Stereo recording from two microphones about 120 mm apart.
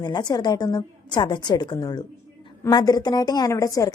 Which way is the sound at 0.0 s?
35° left (ahead or behind).